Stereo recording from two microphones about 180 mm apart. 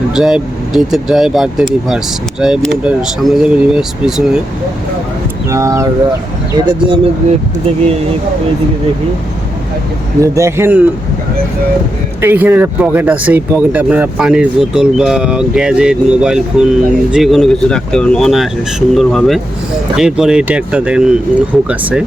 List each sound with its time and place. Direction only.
0.1 s speech: 5° right (ahead or behind)
5.5 s a man's voice: 15° right (ahead or behind)
6.7 s speech: 25° right (ahead or behind)
10.2 s a man's voice: 15° right (ahead or behind)
12.2 s a man's voice: 10° right (ahead or behind)